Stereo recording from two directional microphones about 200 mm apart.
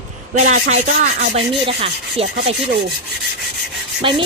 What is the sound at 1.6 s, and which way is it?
Speech, 25° right (ahead or behind).